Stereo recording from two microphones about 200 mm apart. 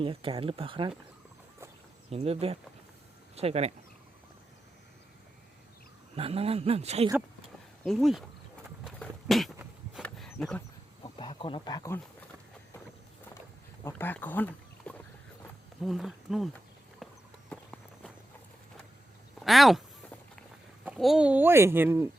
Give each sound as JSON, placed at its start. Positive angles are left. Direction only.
{"t": 0.0, "sound": "speech", "side_deg": -30}
{"t": 2.0, "sound": "speech", "side_deg": -30}
{"t": 6.1, "sound": "speech", "side_deg": -30}
{"t": 7.9, "sound": "speech", "side_deg": 0}
{"t": 8.8, "sound": "a sound", "side_deg": 0}
{"t": 11.0, "sound": "speech", "side_deg": 25}
{"t": 13.8, "sound": "speech", "side_deg": 10}
{"t": 17.0, "sound": "horse", "side_deg": 0}
{"t": 17.5, "sound": "walk", "side_deg": 5}
{"t": 19.4, "sound": "speech", "side_deg": 0}
{"t": 20.8, "sound": "speech", "side_deg": 0}